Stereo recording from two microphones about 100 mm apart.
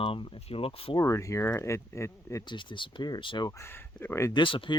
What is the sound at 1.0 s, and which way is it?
Speech, 30° left (ahead or behind).